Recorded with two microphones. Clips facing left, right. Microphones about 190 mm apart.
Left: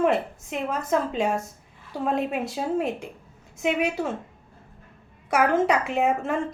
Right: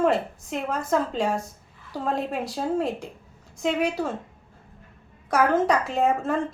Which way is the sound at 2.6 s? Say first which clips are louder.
Right 1 dB; 5° left (ahead or behind).